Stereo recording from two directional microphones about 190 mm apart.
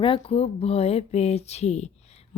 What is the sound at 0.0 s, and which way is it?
Speech, 30° left (ahead or behind).